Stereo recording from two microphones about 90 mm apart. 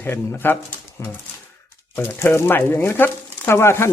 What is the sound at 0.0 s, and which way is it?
Speech, 25° left (ahead or behind).